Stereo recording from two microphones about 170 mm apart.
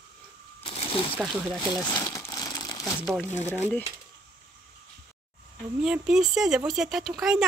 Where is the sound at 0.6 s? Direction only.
35° left (ahead or behind).